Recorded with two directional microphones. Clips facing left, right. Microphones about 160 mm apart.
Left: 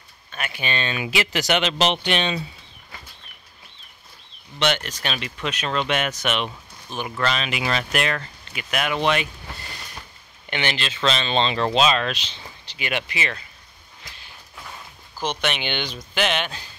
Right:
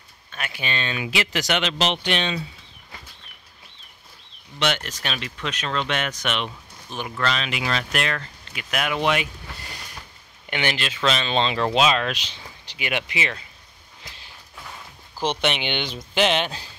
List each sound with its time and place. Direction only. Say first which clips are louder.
0.3 s speech: left 2 dB; centre (ahead or behind)
4.6 s speech: left 2 dB; centre (ahead or behind)
15.1 s speech: right 2 dB; 25° right (ahead or behind)